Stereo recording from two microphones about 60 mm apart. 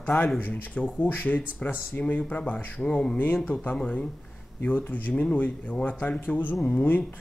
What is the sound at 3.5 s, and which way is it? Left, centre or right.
Speech, left.